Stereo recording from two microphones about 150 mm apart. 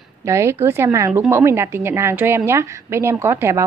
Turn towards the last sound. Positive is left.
turn(degrees=-15)  # may be behind; listen again after turning